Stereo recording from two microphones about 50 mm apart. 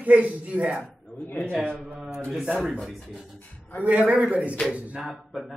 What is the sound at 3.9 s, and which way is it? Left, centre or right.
Speech, right.